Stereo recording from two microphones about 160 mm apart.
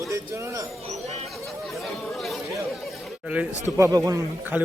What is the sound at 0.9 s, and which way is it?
Chatter, 45° right (ahead or behind).